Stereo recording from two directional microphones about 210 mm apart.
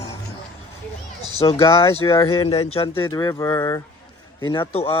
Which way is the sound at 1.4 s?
25° left (ahead or behind).